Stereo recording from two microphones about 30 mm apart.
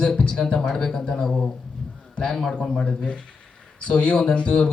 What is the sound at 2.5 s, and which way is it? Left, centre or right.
A man's voice, left.